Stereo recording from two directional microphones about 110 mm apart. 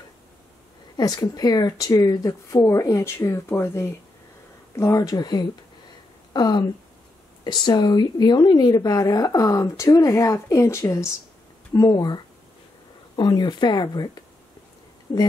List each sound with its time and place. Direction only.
0.9 s a woman's voice: 40° left (ahead or behind)